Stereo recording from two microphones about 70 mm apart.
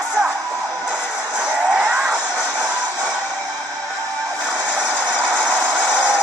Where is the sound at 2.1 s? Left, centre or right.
Centre.